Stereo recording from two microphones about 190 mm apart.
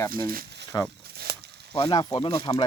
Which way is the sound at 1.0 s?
55° right (ahead or behind).